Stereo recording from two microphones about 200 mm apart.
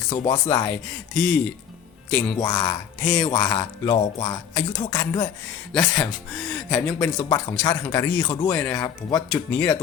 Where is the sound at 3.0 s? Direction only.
10° left (ahead or behind).